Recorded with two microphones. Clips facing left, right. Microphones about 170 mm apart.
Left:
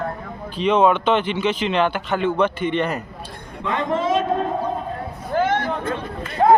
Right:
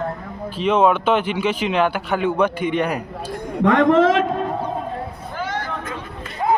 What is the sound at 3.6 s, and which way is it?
Speech, 70° right (ahead or behind).